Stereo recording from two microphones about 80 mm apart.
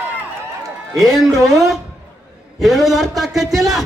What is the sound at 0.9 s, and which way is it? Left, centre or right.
Speech, right.